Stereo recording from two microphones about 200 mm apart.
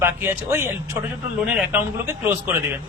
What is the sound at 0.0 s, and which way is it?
A man's voice, 10° right (ahead or behind).